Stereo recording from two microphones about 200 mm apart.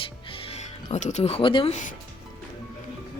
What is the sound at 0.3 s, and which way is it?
Speech, 25° left (ahead or behind).